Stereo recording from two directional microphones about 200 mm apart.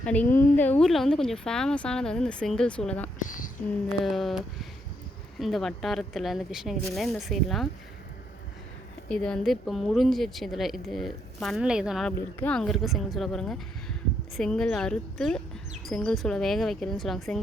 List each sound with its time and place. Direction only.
0.0 s a woman's voice: 5° left (ahead or behind)
3.2 s a woman's voice: 40° left (ahead or behind)
3.8 s a woman's voice: centre (ahead or behind)
9.0 s a woman's voice: 5° left (ahead or behind)